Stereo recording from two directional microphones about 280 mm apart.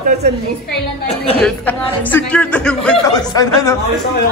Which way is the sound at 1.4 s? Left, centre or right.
Centre.